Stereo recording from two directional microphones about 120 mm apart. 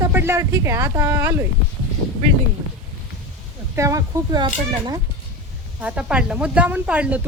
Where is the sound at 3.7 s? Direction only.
25° right (ahead or behind).